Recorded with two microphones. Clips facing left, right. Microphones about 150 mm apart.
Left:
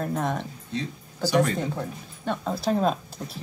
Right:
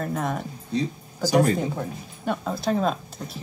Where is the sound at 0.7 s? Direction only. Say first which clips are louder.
Right 5 dB; 40° right (ahead or behind).